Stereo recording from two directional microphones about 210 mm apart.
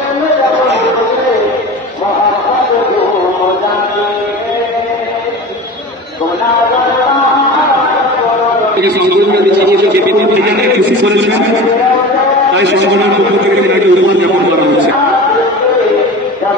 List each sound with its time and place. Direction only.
9.1 s a sound: 50° right (ahead or behind)
11.1 s a man's voice: 55° right (ahead or behind)
12.5 s a man's voice: 55° right (ahead or behind)